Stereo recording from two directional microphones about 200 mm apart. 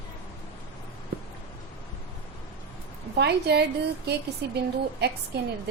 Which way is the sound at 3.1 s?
55° right (ahead or behind).